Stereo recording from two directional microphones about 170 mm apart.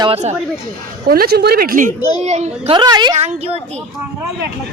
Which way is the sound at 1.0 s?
60° right (ahead or behind).